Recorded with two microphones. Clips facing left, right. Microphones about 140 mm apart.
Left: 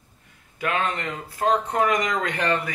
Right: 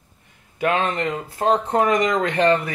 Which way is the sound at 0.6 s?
25° right (ahead or behind).